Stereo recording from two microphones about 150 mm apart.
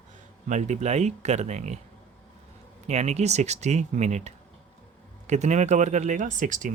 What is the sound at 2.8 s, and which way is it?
Speech, 50° right (ahead or behind).